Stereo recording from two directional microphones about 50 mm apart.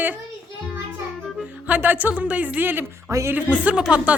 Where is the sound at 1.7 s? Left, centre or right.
Right.